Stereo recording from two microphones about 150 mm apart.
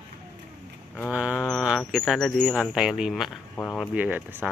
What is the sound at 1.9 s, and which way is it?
Speech, centre (ahead or behind).